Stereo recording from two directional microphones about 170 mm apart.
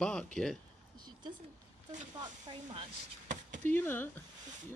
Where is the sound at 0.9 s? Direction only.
25° right (ahead or behind).